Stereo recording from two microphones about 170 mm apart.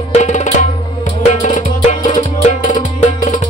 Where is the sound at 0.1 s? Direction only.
45° left (ahead or behind).